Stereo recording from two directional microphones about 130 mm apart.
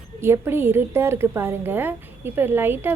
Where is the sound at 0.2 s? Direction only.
20° right (ahead or behind).